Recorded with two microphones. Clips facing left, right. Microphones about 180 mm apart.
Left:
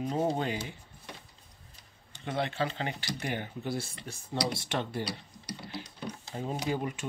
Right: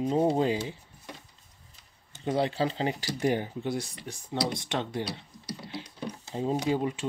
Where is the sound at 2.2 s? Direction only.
30° right (ahead or behind).